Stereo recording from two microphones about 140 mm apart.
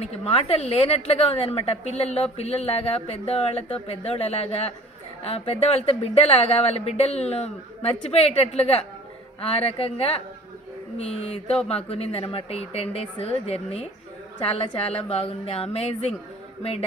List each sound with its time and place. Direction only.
0.0 s a woman's voice: 45° left (ahead or behind)